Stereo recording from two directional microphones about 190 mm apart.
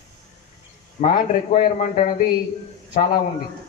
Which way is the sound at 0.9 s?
40° left (ahead or behind).